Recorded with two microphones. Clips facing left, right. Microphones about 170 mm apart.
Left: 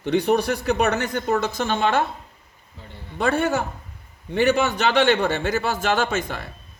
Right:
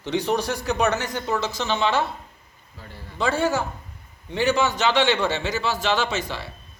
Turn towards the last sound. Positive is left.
turn(degrees=50)  # may be behind; listen again after turning